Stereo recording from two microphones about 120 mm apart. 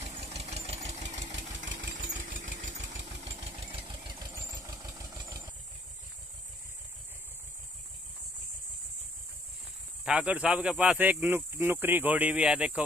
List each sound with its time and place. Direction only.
0.0 s engine: 60° right (ahead or behind); by 2.9 s 80° right
3.0 s engine: 55° right (ahead or behind); by 5.5 s 25° right (ahead or behind)
10.0 s speech: 10° right (ahead or behind)